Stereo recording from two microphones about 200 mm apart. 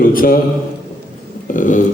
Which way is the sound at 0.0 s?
45° left (ahead or behind).